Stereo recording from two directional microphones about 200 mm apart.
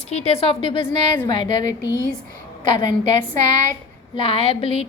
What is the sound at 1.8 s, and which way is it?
Speech, 15° right (ahead or behind).